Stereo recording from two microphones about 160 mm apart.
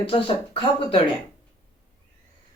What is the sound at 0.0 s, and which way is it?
Speech, 35° left (ahead or behind).